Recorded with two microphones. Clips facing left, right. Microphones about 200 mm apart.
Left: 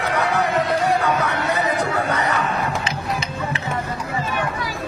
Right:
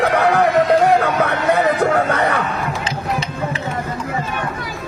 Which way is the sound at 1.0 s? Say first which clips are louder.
Right 3 dB; 55° right (ahead or behind).